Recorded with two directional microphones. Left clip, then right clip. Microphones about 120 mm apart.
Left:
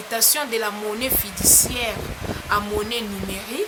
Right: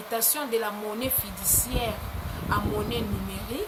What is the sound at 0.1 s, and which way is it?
Speech, 15° left (ahead or behind).